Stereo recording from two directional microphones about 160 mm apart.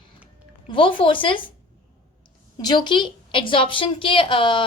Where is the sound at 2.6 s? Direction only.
25° left (ahead or behind).